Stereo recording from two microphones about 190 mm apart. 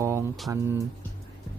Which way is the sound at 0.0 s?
15° right (ahead or behind).